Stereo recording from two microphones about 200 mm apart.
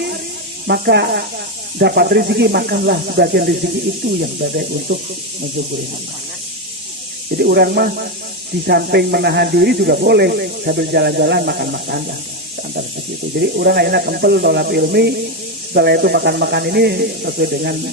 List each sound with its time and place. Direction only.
0.7 s speech: 55° right (ahead or behind)
7.3 s speech: 55° right (ahead or behind)
13.4 s speech: 55° right (ahead or behind)